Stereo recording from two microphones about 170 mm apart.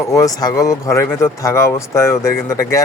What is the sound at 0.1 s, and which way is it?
Speech, 20° left (ahead or behind).